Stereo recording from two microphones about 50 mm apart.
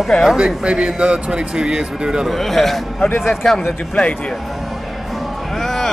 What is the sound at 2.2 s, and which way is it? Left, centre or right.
A man's voice, centre.